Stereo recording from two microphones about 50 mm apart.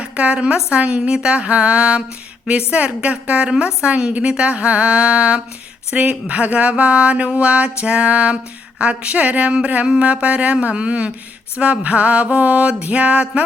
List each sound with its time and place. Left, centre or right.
0.0 s speech: right